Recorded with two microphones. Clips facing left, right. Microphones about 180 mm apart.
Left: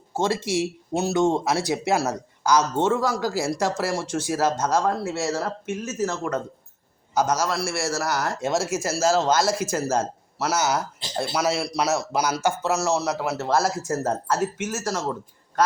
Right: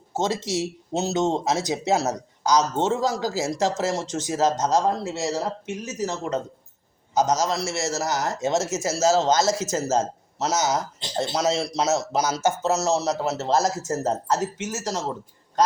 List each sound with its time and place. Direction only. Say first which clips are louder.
0.3 s speech: left 2 dB; 10° left (ahead or behind)
0.9 s speech: left 2 dB; 20° right (ahead or behind)
3.1 s speech: left 1 dB; 55° left (ahead or behind)
3.4 s speech: right 1 dB; 20° right (ahead or behind)